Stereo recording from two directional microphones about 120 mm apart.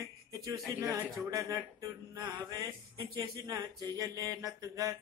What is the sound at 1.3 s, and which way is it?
Speech, 25° right (ahead or behind).